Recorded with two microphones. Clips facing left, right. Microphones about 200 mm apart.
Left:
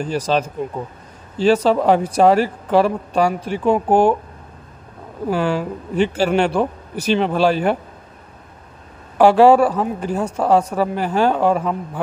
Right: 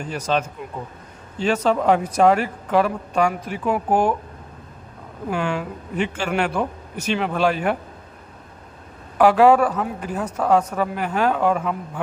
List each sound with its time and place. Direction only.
0.0 s speech: 35° left (ahead or behind)
5.3 s speech: 35° left (ahead or behind)
9.2 s speech: 30° left (ahead or behind)